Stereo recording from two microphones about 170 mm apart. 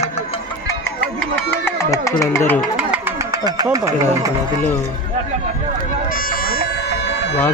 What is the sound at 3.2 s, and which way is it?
Speech, 20° right (ahead or behind).